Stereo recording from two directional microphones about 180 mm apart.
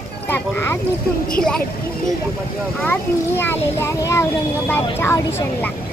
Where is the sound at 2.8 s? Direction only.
10° left (ahead or behind).